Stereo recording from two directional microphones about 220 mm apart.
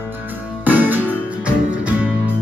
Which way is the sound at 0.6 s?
10° right (ahead or behind).